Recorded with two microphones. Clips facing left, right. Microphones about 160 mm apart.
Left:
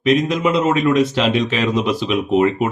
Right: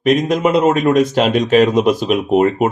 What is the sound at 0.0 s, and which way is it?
A man's voice, 45° right (ahead or behind).